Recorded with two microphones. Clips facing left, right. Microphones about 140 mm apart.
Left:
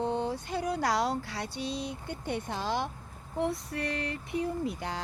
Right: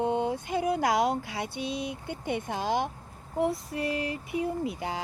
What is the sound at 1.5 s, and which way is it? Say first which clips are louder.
Speech: right 1 dB; 55° right (ahead or behind).